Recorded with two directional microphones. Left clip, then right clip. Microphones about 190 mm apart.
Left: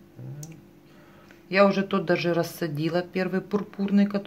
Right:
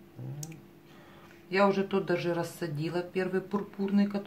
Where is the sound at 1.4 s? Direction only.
50° left (ahead or behind).